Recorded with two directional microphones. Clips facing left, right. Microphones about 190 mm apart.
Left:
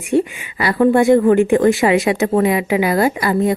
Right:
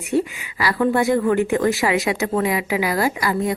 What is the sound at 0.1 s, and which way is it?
A woman's voice, 25° left (ahead or behind).